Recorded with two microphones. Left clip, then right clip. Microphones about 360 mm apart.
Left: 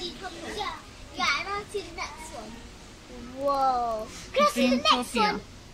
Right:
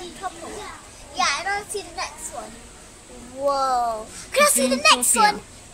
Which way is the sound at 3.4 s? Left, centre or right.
Right.